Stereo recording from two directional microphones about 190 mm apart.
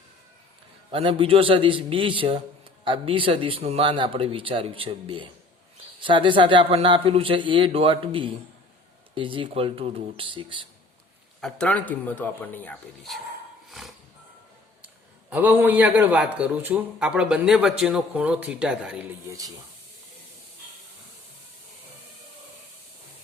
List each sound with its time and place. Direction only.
0.9 s a man's voice: 30° right (ahead or behind)
11.3 s speech: 5° left (ahead or behind)
13.7 s music: centre (ahead or behind)
15.3 s a man's voice: 10° right (ahead or behind)